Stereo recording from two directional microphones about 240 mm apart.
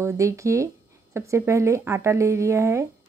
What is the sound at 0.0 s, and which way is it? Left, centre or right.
Speech, centre.